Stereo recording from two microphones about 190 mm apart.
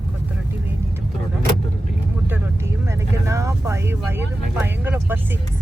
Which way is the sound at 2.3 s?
15° right (ahead or behind).